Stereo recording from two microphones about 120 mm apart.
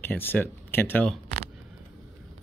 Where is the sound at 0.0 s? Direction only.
15° left (ahead or behind).